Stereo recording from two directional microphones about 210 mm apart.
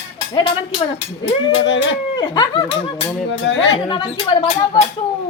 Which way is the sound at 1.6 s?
60° left (ahead or behind).